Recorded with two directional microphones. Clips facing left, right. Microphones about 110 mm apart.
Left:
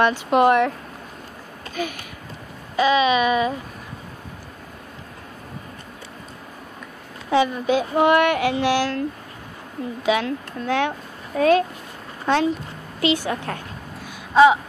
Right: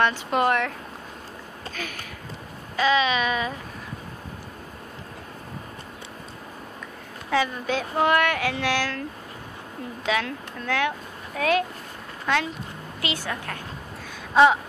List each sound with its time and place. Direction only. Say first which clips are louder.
0.0 s speech: left 5 dB; 15° left (ahead or behind)
1.8 s speech: left 10 dB; 15° left (ahead or behind)
7.2 s speech: left 6 dB; 25° left (ahead or behind)
10.0 s speech: left 5 dB; 15° left (ahead or behind)
11.3 s a woman's voice: left 6 dB; 30° left (ahead or behind)
14.3 s a sound: left 3 dB; 5° left (ahead or behind)